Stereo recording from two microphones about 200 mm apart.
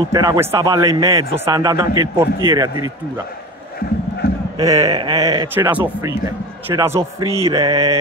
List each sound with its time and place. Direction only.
0.1 s a man's voice: 15° right (ahead or behind)
4.2 s a sound: 55° left (ahead or behind)
4.6 s mantra: 20° right (ahead or behind)
5.5 s a man's voice: 10° right (ahead or behind)
7.0 s mantra: 15° right (ahead or behind)